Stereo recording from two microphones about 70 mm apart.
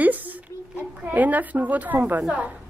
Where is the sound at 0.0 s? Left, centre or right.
Right.